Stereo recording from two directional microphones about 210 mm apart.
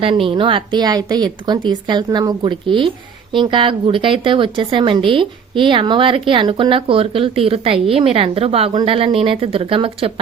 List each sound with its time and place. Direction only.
0.0 s speech: 25° right (ahead or behind)